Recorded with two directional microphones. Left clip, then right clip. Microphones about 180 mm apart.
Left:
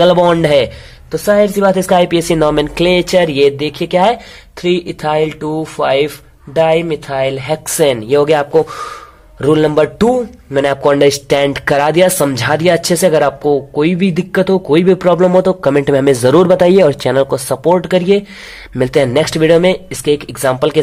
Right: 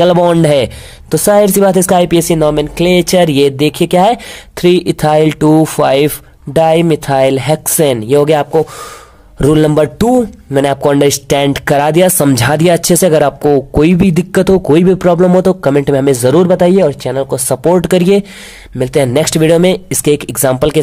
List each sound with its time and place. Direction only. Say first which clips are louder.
0.0 s speech: right 1 dB; 40° right (ahead or behind)
9.4 s speech: right 1 dB; 40° right (ahead or behind)
10.5 s speech: right 1 dB; 25° right (ahead or behind); by 17.4 s 10° right (ahead or behind)
17.7 s speech: right 2 dB; 35° right (ahead or behind)
18.8 s speech: even; 20° right (ahead or behind)